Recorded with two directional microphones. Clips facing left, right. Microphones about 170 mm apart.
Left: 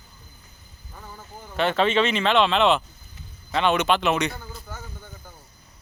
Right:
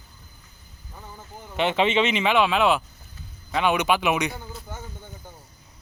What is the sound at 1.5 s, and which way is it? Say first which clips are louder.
Speech: even; 15° right (ahead or behind).